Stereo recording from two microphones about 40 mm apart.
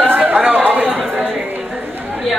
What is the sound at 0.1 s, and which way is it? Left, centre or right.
Chatter, right.